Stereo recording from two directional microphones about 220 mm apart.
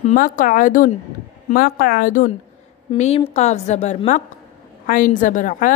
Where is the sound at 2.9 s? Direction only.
30° left (ahead or behind).